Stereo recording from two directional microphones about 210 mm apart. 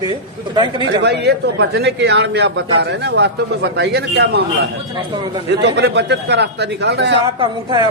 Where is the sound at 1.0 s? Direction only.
50° right (ahead or behind).